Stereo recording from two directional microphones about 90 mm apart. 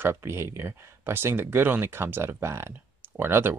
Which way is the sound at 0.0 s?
25° right (ahead or behind).